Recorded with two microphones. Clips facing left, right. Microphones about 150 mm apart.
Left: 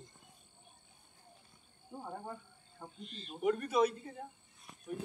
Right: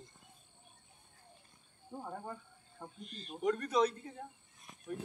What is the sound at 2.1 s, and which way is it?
Speech, 5° left (ahead or behind).